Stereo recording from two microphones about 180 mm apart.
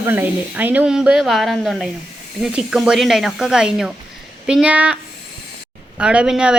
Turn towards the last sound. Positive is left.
turn(degrees=-5)  # may be behind; listen again after turning